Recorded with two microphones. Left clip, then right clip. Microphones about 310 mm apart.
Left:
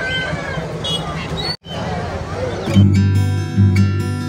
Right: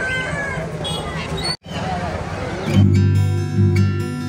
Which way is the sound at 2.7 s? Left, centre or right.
Centre.